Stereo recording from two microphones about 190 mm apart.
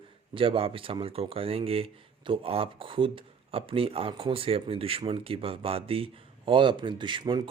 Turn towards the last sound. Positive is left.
turn(degrees=-25)  # may be behind; listen again after turning